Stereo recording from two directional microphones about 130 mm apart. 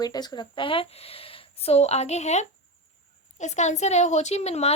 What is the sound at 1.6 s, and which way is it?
A woman's voice, 55° left (ahead or behind).